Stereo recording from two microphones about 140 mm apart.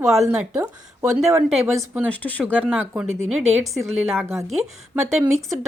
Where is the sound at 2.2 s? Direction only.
10° left (ahead or behind).